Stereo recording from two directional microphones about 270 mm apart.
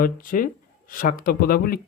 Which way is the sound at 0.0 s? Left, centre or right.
Left.